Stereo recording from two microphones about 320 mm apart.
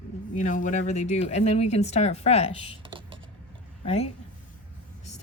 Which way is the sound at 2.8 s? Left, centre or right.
Centre.